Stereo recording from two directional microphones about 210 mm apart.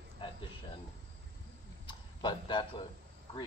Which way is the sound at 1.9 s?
20° left (ahead or behind).